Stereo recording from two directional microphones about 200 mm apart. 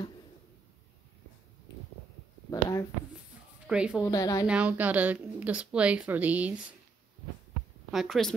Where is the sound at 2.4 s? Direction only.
15° left (ahead or behind).